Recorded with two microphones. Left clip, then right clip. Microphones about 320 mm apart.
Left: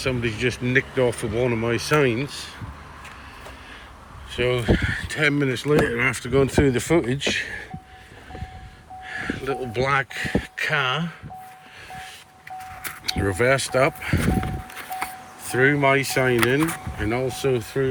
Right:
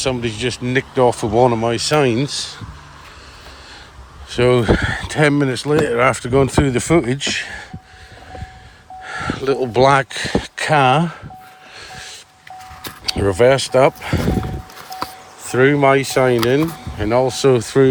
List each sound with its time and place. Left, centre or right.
0.0 s speech: centre
4.3 s speech: centre
6.8 s speech: right
7.1 s speech: centre
9.0 s speech: centre
13.1 s speech: centre
15.4 s speech: centre